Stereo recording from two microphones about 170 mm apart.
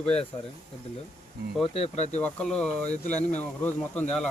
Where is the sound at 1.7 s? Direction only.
35° left (ahead or behind).